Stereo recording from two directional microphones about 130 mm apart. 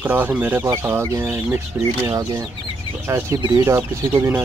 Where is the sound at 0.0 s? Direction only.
15° right (ahead or behind).